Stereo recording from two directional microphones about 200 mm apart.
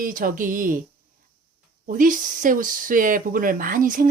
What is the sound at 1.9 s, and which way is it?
Speech, 40° right (ahead or behind).